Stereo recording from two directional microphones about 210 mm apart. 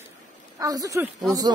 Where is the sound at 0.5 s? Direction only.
15° right (ahead or behind).